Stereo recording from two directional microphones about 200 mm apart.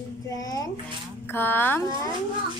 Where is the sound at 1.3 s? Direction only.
10° left (ahead or behind).